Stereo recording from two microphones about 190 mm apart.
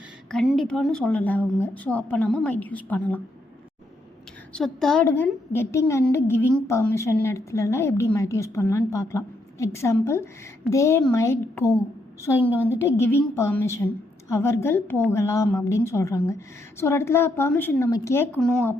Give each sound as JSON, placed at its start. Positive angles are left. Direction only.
{"t": 0.3, "sound": "a woman's voice", "side_deg": 0}
{"t": 4.5, "sound": "a woman's voice", "side_deg": 0}
{"t": 5.0, "sound": "a woman's voice", "side_deg": 15}